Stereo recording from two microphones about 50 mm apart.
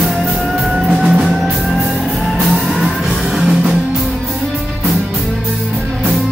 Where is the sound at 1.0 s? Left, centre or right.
Centre.